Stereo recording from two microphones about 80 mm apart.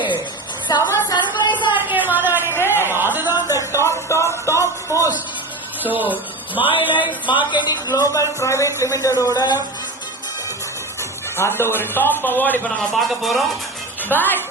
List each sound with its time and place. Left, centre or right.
0.7 s a woman's voice: left
1.1 s a sound: left
1.7 s a sound: right
3.2 s a sound: left
3.5 s a sound: left
5.9 s speech: right
7.3 s speech: left
7.9 s speech: left
9.2 s a woman's voice: left
11.3 s a man's voice: left
12.9 s speech: centre
14.1 s a man's voice: left